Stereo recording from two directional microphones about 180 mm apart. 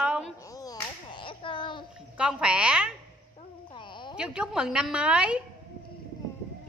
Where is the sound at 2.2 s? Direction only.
5° right (ahead or behind).